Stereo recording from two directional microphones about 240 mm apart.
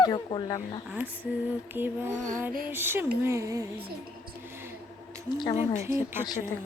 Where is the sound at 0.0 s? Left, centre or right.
Centre.